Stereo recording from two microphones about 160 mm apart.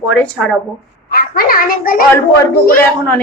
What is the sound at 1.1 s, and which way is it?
Speech, 70° left (ahead or behind).